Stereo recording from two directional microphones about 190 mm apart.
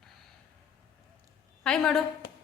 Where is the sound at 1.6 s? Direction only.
5° left (ahead or behind).